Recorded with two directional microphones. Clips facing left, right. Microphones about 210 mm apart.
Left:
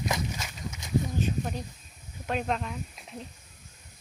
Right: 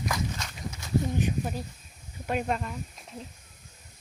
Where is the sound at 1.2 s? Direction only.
10° right (ahead or behind).